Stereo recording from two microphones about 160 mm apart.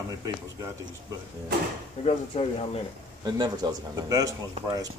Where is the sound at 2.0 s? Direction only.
40° left (ahead or behind).